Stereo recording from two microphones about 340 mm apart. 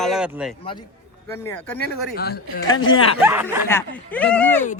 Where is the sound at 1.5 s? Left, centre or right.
Centre.